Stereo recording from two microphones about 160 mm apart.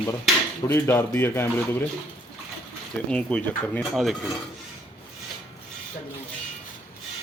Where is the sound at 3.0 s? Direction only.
5° left (ahead or behind).